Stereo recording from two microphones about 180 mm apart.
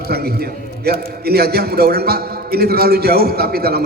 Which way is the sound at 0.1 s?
60° right (ahead or behind).